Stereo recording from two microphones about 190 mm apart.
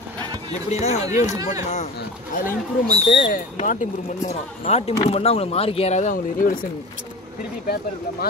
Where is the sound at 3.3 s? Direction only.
45° left (ahead or behind).